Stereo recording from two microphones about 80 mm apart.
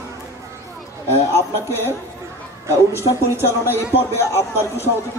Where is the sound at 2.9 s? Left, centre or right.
Left.